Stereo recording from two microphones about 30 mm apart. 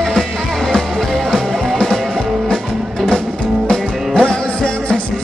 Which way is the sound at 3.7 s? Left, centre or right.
Centre.